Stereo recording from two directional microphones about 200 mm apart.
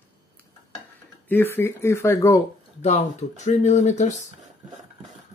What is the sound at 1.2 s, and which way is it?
Speech, 10° left (ahead or behind).